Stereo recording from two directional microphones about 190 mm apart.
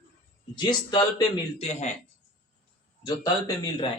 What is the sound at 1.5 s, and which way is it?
Speech, 35° left (ahead or behind).